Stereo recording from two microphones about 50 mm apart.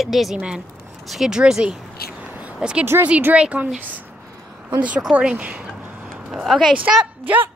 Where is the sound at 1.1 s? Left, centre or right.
Centre.